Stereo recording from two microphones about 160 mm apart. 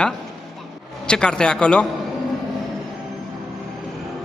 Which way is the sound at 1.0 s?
5° left (ahead or behind).